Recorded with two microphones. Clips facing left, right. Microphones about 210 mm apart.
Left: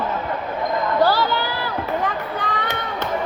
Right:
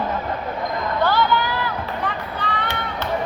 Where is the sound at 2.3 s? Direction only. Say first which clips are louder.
Left 1 dB; 45° left (ahead or behind).